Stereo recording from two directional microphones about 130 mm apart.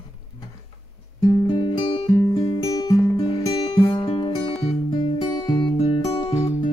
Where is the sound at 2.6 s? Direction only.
25° left (ahead or behind).